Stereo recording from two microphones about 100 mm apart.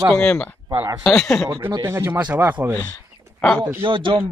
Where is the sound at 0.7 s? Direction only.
35° right (ahead or behind).